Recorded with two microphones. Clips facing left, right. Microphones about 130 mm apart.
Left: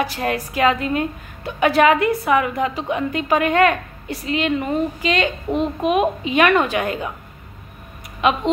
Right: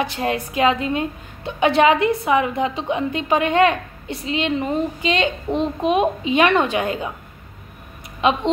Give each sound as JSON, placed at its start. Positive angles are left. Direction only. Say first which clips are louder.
{"t": 0.0, "sound": "a woman's voice", "louder": "even", "side_deg": -25}
{"t": 5.5, "sound": "a child's voice", "louder": "even", "side_deg": 5}
{"t": 5.9, "sound": "a woman's voice", "louder": "right 1 dB", "side_deg": -30}
{"t": 8.2, "sound": "a woman's voice", "louder": "even", "side_deg": -30}